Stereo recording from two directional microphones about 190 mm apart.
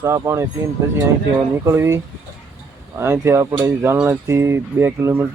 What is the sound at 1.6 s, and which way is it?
Speech, 15° right (ahead or behind).